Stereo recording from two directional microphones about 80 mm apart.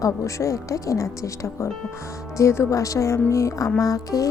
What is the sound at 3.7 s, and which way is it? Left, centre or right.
Music, left.